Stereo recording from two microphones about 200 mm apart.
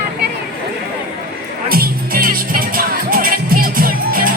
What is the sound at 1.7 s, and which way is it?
Music, 50° right (ahead or behind).